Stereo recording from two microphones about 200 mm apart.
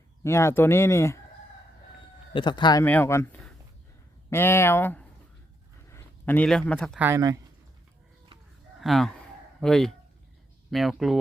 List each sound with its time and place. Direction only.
0.2 s speech: 15° left (ahead or behind)
2.3 s speech: 25° left (ahead or behind)
2.8 s speech: 10° left (ahead or behind)
7.0 s speech: 15° right (ahead or behind)
8.8 s a sound: centre (ahead or behind)
10.7 s speech: centre (ahead or behind)